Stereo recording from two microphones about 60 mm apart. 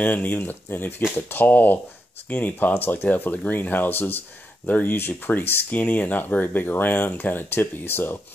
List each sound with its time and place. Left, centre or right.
0.0 s speech: left